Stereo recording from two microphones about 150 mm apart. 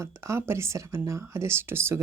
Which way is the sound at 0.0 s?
20° right (ahead or behind).